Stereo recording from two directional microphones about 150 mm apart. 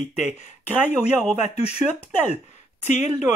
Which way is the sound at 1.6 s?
45° left (ahead or behind).